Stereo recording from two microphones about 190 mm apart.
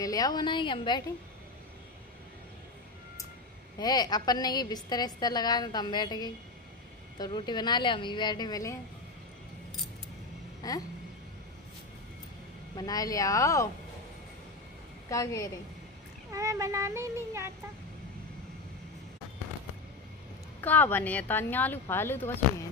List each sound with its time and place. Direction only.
0.0 s a woman's voice: 20° left (ahead or behind)
3.7 s a woman's voice: 20° left (ahead or behind)
10.6 s a woman's voice: 20° left (ahead or behind)
12.7 s speech: 20° left (ahead or behind)
15.0 s speech: 15° left (ahead or behind)
16.3 s speech: 15° right (ahead or behind)
20.6 s speech: 10° left (ahead or behind)